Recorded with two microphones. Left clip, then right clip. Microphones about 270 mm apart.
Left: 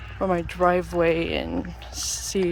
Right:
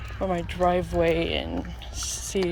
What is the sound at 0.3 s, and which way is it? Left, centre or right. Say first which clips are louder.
Speech: left 3 dB; centre.